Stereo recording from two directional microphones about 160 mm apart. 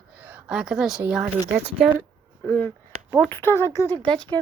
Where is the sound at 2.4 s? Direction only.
10° left (ahead or behind).